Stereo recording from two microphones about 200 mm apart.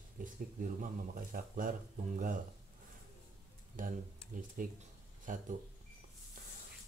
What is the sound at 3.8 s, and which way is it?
Speech, 45° right (ahead or behind).